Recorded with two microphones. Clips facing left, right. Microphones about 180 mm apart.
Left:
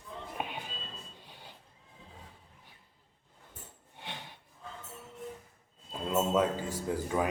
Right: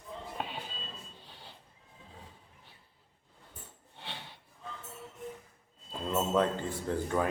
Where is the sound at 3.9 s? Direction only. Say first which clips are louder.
Left 1 dB; 15° left (ahead or behind).